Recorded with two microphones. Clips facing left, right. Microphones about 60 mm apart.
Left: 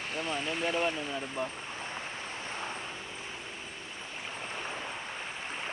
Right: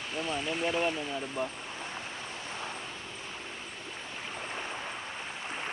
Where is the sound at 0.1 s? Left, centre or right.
Left.